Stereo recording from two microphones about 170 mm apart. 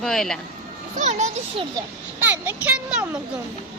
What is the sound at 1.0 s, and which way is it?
Speech, 40° right (ahead or behind).